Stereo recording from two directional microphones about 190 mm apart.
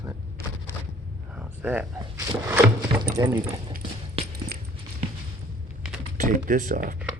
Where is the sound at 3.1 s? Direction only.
20° right (ahead or behind).